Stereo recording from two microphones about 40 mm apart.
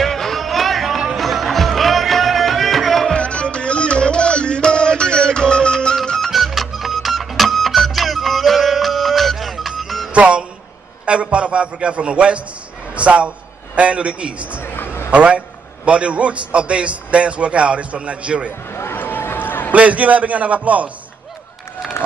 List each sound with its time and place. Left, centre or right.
0.0 s music: centre
3.1 s music: left
6.3 s printer: centre
10.1 s music: right
11.1 s a man's voice: right
14.6 s a sound: left
15.0 s a man's voice: right
18.9 s a sound: left
19.7 s a man's voice: right
21.8 s run: centre